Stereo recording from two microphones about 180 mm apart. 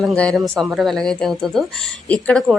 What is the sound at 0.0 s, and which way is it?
A woman's voice, centre (ahead or behind).